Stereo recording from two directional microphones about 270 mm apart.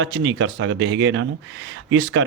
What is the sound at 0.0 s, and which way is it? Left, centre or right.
Speech, right.